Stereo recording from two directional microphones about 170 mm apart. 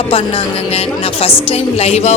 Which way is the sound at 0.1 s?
35° left (ahead or behind).